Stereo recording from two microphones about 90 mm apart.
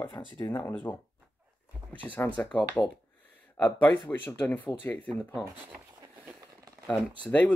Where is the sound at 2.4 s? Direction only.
15° left (ahead or behind).